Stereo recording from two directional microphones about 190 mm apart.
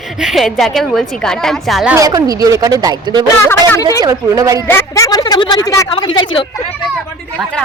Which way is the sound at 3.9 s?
20° right (ahead or behind).